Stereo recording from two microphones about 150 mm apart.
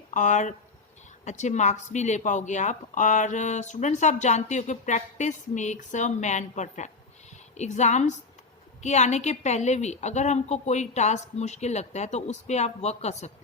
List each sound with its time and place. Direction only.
0.1 s speech: 55° left (ahead or behind)